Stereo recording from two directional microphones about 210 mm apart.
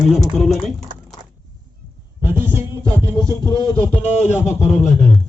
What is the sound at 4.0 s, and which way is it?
Speech, 30° left (ahead or behind).